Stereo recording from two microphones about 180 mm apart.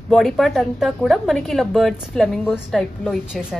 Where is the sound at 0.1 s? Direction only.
Centre (ahead or behind).